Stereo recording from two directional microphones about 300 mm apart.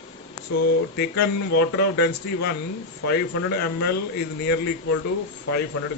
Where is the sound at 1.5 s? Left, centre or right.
Left.